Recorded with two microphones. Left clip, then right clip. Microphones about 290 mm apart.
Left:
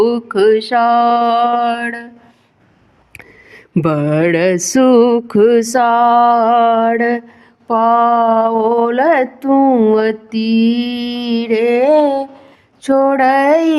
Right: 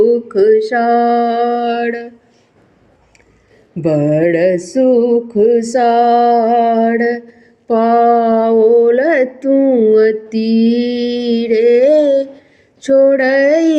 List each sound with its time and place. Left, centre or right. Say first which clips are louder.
0.0 s mantra: right 1 dB; centre
4.2 s mantra: right 1 dB; left
5.1 s music: even; left
5.8 s mantra: even; centre
9.9 s mantra: right 4 dB; centre